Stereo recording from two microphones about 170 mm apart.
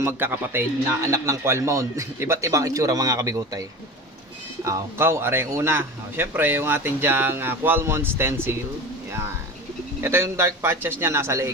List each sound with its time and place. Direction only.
0.0 s speech: 15° right (ahead or behind)
10.0 s speech: 15° right (ahead or behind)